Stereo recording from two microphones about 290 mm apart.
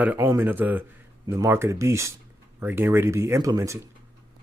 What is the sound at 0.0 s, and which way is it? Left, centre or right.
Speech, centre.